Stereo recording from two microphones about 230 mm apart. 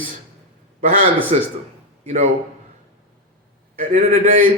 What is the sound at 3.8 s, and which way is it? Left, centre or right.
Speech, right.